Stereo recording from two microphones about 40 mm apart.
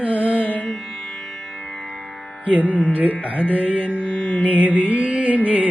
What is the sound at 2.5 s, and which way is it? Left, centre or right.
Music, right.